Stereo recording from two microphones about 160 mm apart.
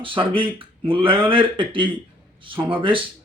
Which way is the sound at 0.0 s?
35° right (ahead or behind).